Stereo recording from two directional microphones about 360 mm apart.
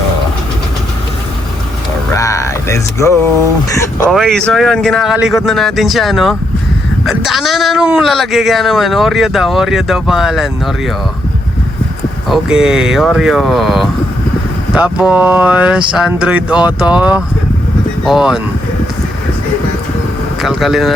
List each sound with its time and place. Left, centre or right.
2.1 s a sound: centre
3.7 s speech: centre
12.3 s speech: centre
20.4 s speech: centre